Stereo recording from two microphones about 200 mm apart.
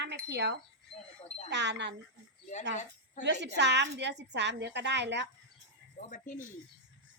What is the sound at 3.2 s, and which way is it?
A woman's voice, 60° right (ahead or behind).